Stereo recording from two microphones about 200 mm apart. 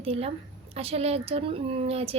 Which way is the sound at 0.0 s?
30° right (ahead or behind).